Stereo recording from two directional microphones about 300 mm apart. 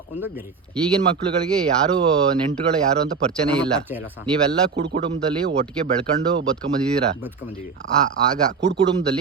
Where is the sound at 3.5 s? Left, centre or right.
Centre.